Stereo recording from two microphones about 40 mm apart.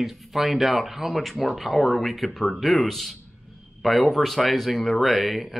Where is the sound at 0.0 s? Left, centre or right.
Centre.